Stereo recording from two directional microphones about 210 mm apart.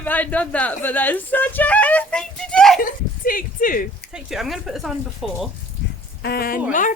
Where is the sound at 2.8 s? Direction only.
40° left (ahead or behind).